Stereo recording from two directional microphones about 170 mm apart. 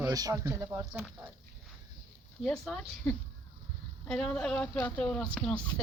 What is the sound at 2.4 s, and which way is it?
Speech, 5° left (ahead or behind).